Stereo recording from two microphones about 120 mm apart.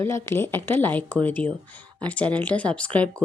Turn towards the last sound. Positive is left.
turn(degrees=10)  # may be behind; listen again after turning